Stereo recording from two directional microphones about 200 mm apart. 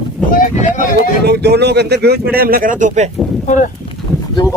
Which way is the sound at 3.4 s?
40° left (ahead or behind).